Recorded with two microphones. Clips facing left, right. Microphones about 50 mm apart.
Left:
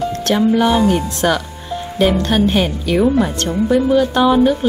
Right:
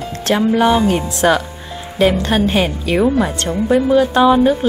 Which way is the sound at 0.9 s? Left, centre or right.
Right.